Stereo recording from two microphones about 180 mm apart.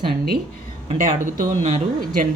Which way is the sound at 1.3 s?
40° right (ahead or behind).